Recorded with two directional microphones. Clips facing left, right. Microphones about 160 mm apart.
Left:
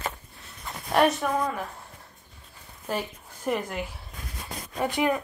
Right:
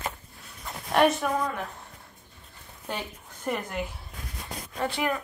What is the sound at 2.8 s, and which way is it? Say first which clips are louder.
Speech: left 4 dB; 5° left (ahead or behind).